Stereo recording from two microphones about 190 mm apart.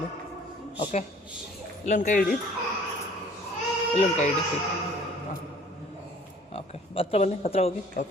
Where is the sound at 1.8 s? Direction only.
40° left (ahead or behind).